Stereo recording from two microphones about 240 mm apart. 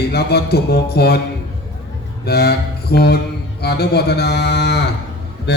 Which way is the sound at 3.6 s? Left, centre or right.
Left.